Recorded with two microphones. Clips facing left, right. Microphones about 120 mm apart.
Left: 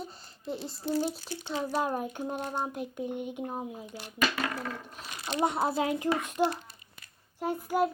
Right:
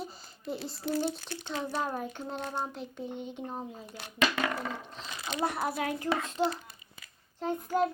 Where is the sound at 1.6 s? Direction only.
10° left (ahead or behind).